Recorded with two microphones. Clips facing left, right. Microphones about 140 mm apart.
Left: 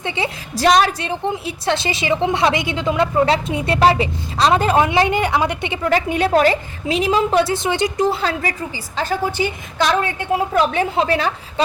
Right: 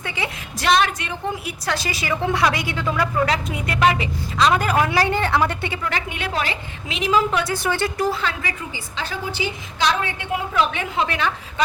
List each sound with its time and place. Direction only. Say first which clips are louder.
0.0 s a woman's voice: left 5 dB; 30° left (ahead or behind)
5.8 s a woman's voice: left 9 dB; 35° left (ahead or behind); by 8.2 s 20° left (ahead or behind)
8.2 s a woman's voice: left 5 dB; 40° left (ahead or behind)
9.0 s a woman's voice: left 7 dB; 50° left (ahead or behind)